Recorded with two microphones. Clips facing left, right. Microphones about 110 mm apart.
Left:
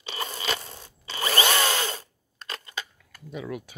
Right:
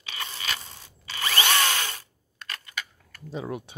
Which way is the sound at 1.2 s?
25° left (ahead or behind).